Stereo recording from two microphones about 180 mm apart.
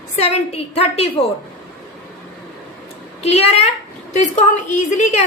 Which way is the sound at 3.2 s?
35° left (ahead or behind).